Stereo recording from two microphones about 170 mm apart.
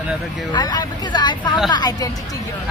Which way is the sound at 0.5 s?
25° left (ahead or behind).